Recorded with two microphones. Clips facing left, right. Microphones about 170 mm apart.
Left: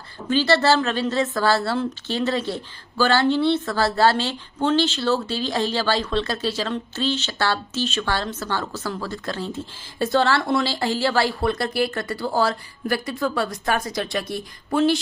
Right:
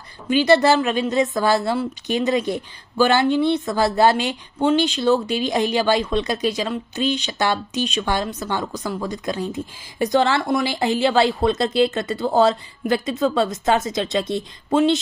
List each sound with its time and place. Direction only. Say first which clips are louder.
0.3 s a woman's voice: right 3 dB; 15° right (ahead or behind)